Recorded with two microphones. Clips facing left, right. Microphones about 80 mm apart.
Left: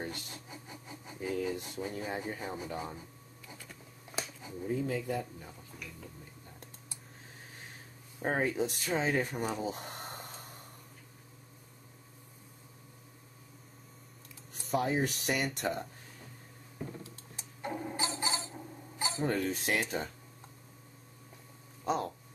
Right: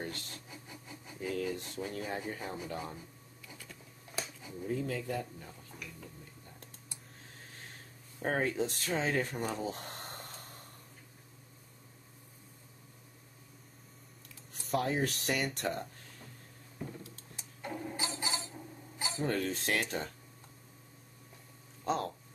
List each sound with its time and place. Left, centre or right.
0.0 s a sound: centre
4.1 s a sound: left
4.6 s speech: centre
8.2 s speech: centre
14.7 s speech: centre
17.6 s a sound: left
18.9 s cutlery: left
19.2 s speech: centre
21.8 s speech: centre